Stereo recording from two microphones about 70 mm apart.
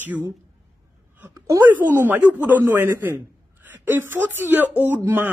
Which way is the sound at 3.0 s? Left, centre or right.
Right.